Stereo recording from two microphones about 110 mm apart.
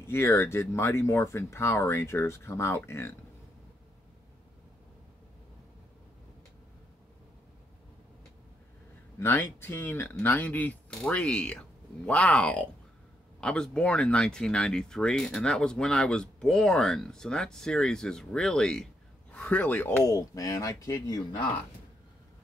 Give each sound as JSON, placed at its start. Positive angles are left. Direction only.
{"t": 0.0, "sound": "speech", "side_deg": 25}
{"t": 9.2, "sound": "speech", "side_deg": 20}
{"t": 20.1, "sound": "speech", "side_deg": 35}